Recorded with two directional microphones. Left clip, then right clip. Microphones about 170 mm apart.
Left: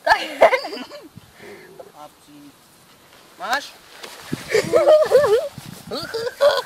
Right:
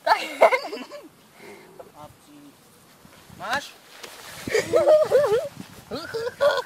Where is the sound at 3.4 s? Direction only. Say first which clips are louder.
Left 4 dB; 20° left (ahead or behind).